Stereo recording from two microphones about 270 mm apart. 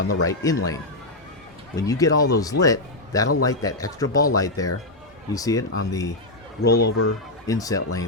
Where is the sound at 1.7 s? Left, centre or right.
Centre.